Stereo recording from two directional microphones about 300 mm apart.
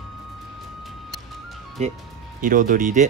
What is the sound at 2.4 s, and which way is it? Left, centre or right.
Speech, right.